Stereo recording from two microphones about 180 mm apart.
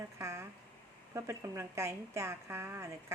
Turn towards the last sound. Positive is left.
turn(degrees=-15)  # may be behind; listen again after turning